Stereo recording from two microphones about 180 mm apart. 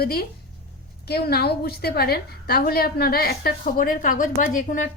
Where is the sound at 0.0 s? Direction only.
60° left (ahead or behind).